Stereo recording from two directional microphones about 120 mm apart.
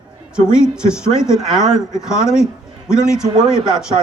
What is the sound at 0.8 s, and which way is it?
A man's voice, 5° right (ahead or behind).